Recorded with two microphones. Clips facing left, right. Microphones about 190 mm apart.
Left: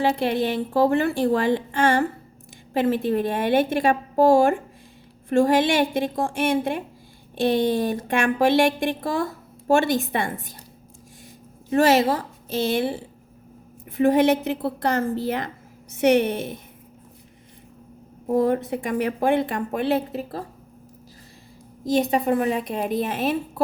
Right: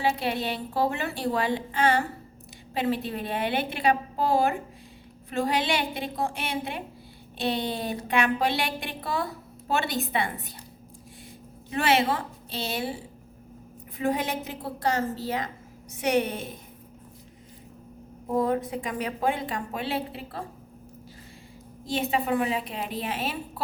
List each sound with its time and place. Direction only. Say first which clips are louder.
0.0 s speech: left 6 dB; 50° left (ahead or behind)
11.7 s speech: left 6 dB; 40° left (ahead or behind)
13.9 s a woman's voice: left 10 dB; 70° left (ahead or behind)
16.0 s a woman's voice: left 7 dB; 70° left (ahead or behind)
18.3 s speech: left 4 dB; 60° left (ahead or behind); by 20.4 s 45° left (ahead or behind)
21.8 s speech: left 6 dB; 40° left (ahead or behind)